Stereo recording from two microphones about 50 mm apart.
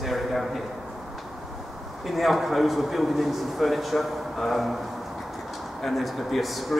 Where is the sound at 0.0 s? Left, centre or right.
Centre.